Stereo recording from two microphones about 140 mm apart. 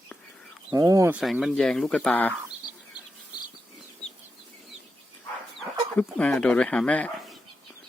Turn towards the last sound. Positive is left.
turn(degrees=10)  # may be behind; listen again after turning